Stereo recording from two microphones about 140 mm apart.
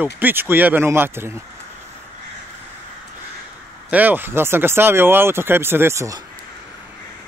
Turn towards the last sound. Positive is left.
turn(degrees=-20)  # may be behind; listen again after turning